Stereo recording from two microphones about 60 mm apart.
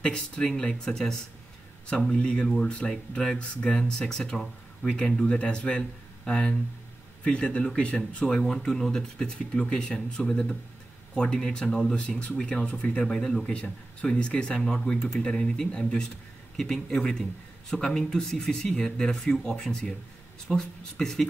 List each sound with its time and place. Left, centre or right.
0.0 s speech: centre
8.4 s speech: centre